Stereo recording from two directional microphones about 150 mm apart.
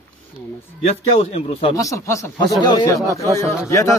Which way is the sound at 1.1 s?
40° left (ahead or behind).